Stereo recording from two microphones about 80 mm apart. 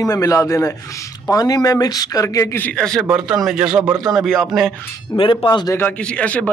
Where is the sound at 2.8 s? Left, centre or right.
Centre.